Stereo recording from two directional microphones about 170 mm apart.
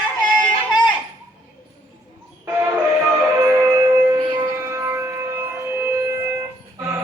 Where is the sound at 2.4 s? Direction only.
20° right (ahead or behind).